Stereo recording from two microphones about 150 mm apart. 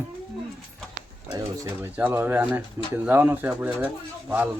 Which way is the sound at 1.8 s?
15° right (ahead or behind).